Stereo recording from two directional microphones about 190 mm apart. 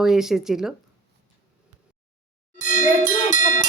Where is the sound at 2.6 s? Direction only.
40° left (ahead or behind).